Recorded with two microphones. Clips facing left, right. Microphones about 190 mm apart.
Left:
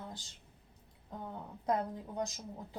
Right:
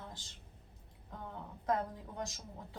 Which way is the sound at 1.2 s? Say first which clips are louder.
Left 2 dB; 20° left (ahead or behind).